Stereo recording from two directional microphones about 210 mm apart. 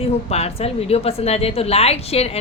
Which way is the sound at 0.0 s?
30° left (ahead or behind).